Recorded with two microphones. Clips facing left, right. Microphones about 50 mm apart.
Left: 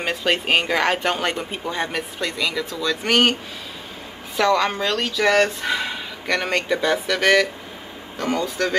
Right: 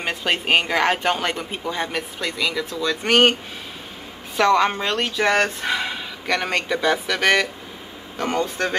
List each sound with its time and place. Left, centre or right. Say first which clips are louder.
0.0 s speech: left 1 dB; centre
1.8 s speech: left 3 dB; centre
2.8 s speech: right 2 dB; right
4.4 s speech: right 1 dB; right
5.9 s speech: even; centre
8.3 s speech: left 1 dB; right